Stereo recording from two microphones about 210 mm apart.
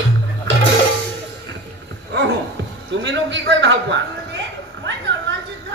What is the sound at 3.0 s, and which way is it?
A man's voice, 60° right (ahead or behind).